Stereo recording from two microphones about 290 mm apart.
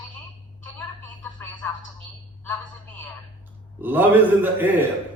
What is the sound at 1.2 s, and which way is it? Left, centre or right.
Speech, centre.